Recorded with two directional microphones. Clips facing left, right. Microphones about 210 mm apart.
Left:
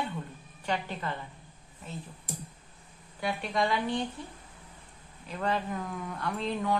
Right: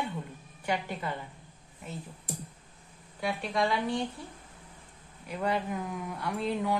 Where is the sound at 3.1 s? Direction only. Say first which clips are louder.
Even; centre (ahead or behind).